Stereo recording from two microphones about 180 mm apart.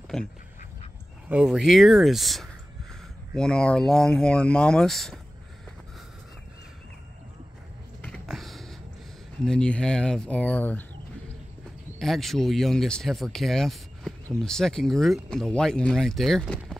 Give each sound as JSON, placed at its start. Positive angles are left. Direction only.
{"t": 1.3, "sound": "speech", "side_deg": -5}
{"t": 8.0, "sound": "a sound", "side_deg": 5}
{"t": 9.4, "sound": "speech", "side_deg": 5}
{"t": 12.0, "sound": "speech", "side_deg": 0}